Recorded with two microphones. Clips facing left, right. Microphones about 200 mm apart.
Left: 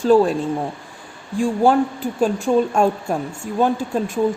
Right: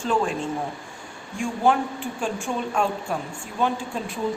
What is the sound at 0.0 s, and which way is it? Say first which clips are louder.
Speech: left 10 dB; 35° left (ahead or behind).